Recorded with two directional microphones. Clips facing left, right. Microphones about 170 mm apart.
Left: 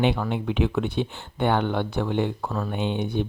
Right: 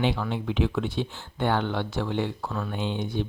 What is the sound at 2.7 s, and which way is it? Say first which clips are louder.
Speech: left 4 dB; 60° left (ahead or behind).